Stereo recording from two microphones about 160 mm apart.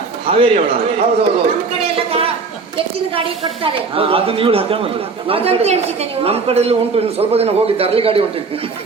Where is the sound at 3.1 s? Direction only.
35° right (ahead or behind).